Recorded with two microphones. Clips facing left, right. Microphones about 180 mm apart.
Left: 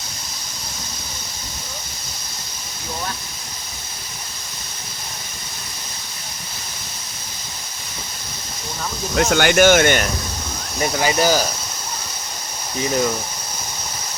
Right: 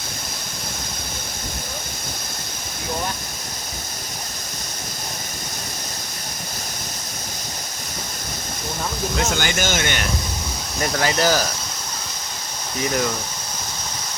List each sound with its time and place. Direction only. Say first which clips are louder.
9.1 s speech: left 10 dB; 60° left (ahead or behind)
10.8 s speech: left 2 dB; 15° left (ahead or behind)